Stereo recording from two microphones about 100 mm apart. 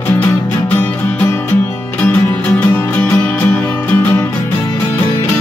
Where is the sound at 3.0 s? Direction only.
10° left (ahead or behind).